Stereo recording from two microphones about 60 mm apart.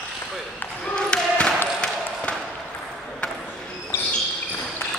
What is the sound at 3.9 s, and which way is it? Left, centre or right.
Basketball bounce, left.